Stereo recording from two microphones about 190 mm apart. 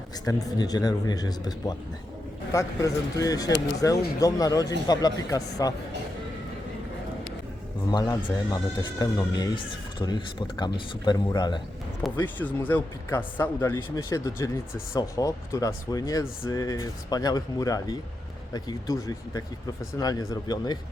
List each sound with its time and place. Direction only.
0.3 s speech: 20° left (ahead or behind)
7.9 s speech: 20° left (ahead or behind)
12.2 s speech: 10° left (ahead or behind)